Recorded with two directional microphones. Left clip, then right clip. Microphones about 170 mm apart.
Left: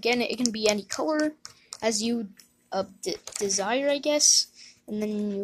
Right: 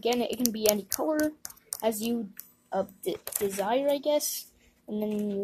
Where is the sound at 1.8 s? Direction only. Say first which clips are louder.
Left 2 dB; 15° left (ahead or behind).